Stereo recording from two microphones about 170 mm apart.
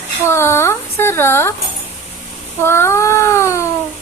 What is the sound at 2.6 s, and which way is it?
Speech, 15° left (ahead or behind).